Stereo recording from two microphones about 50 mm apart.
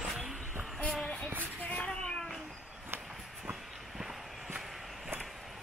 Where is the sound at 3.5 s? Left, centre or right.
Centre.